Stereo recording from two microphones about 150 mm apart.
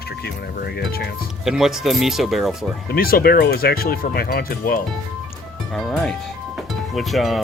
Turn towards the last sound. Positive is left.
turn(degrees=0)  # may be behind; listen again after turning